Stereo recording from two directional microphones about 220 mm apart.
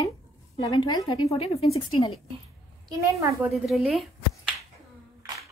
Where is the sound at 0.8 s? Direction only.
20° left (ahead or behind).